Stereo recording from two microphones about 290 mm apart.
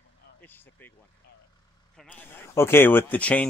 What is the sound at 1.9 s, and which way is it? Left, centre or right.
Speech, centre.